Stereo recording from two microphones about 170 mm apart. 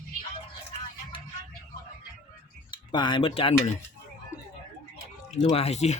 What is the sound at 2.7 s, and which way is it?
Speech, 25° left (ahead or behind).